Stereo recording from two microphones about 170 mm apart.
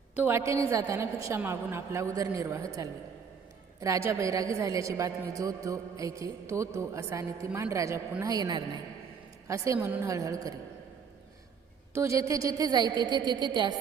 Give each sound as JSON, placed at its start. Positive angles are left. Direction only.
{"t": 0.2, "sound": "a woman's voice", "side_deg": -15}
{"t": 11.9, "sound": "a man's voice", "side_deg": -15}